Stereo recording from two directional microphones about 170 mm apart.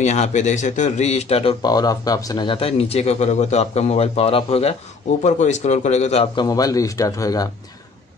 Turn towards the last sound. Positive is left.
turn(degrees=20)  # may be behind; listen again after turning